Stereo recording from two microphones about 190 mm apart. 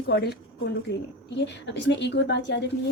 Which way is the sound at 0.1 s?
60° left (ahead or behind).